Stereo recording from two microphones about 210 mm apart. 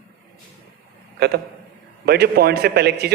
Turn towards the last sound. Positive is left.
turn(degrees=-50)  # may be behind; listen again after turning